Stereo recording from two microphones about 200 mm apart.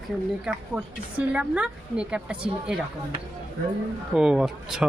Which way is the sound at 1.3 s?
5° right (ahead or behind).